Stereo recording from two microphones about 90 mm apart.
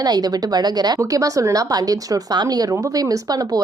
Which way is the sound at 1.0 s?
40° right (ahead or behind).